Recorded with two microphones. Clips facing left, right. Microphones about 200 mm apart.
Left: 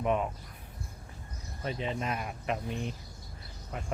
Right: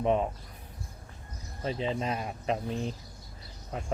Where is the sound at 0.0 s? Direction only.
30° right (ahead or behind).